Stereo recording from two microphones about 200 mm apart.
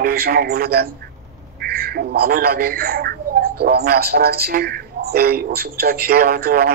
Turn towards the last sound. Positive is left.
turn(degrees=-50)  # may be behind; listen again after turning